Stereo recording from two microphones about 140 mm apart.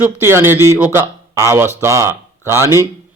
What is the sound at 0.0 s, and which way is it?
A man's voice, 15° right (ahead or behind).